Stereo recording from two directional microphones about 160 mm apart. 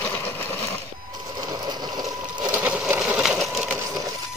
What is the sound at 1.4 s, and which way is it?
Sewing machine, 25° right (ahead or behind).